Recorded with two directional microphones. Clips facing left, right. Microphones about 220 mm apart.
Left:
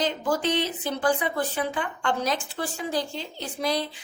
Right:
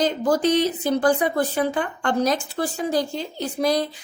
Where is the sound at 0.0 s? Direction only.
40° right (ahead or behind).